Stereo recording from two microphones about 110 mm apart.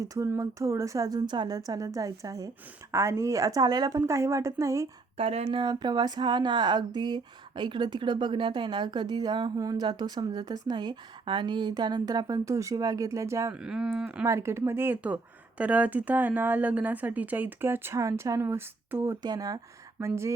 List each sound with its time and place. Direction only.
0.0 s a woman's voice: 30° right (ahead or behind)
5.1 s a woman's voice: 65° right (ahead or behind); by 13.5 s 25° right (ahead or behind)
13.5 s speech: 5° right (ahead or behind)
14.3 s speech: 25° right (ahead or behind)
19.2 s a woman's voice: 35° right (ahead or behind)
20.0 s speech: 25° right (ahead or behind)